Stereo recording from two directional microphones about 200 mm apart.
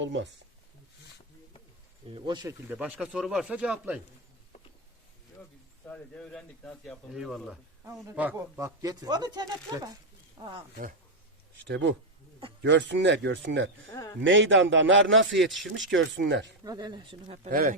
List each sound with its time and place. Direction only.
0.0 s speech: 65° right (ahead or behind)
2.1 s speech: 20° right (ahead or behind); by 4.0 s 5° right (ahead or behind)
5.8 s speech: 5° left (ahead or behind); by 10.5 s 20° right (ahead or behind)
11.7 s a man's voice: 65° right (ahead or behind)
16.6 s speech: 20° right (ahead or behind)
17.5 s speech: 45° right (ahead or behind)